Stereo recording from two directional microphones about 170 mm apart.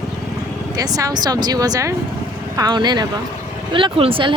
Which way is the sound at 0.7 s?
20° right (ahead or behind).